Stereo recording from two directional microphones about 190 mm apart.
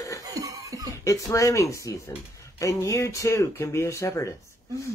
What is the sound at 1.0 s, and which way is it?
Speech, 15° left (ahead or behind).